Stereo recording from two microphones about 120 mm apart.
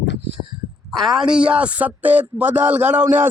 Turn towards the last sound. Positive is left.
turn(degrees=-15)  # may be behind; listen again after turning